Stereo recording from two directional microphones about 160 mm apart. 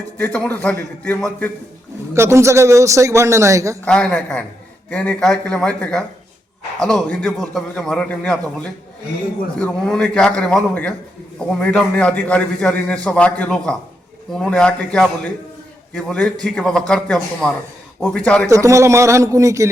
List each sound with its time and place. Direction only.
0.2 s a man's voice: 10° left (ahead or behind)
2.1 s a man's voice: 15° right (ahead or behind)
3.8 s a man's voice: 5° left (ahead or behind)
18.4 s a man's voice: 20° right (ahead or behind)